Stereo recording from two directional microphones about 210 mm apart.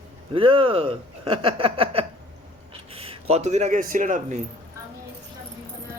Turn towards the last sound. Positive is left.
turn(degrees=-35)  # may be behind; listen again after turning